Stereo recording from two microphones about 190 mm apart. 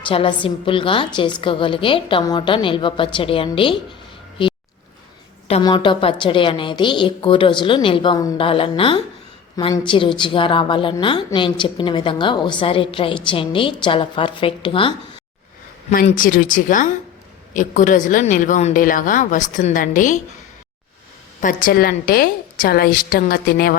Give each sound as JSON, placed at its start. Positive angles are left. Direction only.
{"t": 0.1, "sound": "a woman's voice", "side_deg": 30}
{"t": 4.4, "sound": "a sound", "side_deg": 25}
{"t": 5.6, "sound": "a woman's voice", "side_deg": 25}
{"t": 16.0, "sound": "a woman's voice", "side_deg": 45}
{"t": 21.4, "sound": "a woman's voice", "side_deg": 50}